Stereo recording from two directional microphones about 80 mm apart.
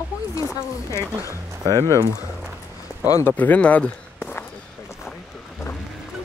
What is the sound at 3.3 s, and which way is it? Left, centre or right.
Speech, centre.